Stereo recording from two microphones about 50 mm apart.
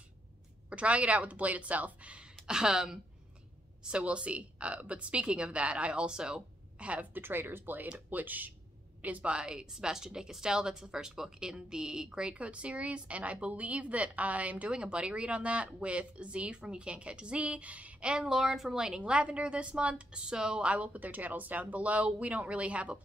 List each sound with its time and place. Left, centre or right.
0.7 s a woman's voice: right
2.4 s speech: centre
3.8 s a woman's voice: right
7.2 s a woman's voice: right
18.1 s speech: centre
18.9 s a woman's voice: right
20.7 s a woman's voice: right